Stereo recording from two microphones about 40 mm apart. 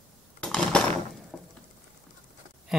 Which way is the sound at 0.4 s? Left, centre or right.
Left.